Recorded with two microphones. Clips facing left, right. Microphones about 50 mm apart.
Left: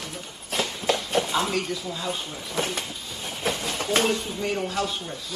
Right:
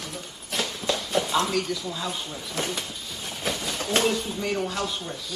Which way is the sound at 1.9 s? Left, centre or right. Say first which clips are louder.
Left 1 dB; centre.